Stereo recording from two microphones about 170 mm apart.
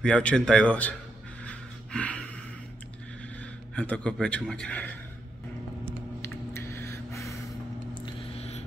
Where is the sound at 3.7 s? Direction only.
5° left (ahead or behind).